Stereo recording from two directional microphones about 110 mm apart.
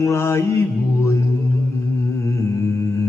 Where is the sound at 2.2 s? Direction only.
25° left (ahead or behind).